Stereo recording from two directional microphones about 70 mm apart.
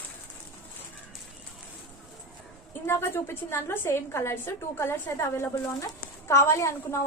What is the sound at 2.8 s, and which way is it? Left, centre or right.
A woman's voice, left.